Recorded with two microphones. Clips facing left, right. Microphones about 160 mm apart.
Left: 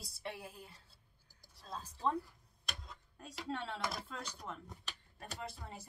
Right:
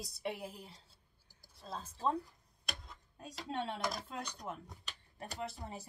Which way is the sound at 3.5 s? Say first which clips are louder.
Right 2 dB; 20° right (ahead or behind).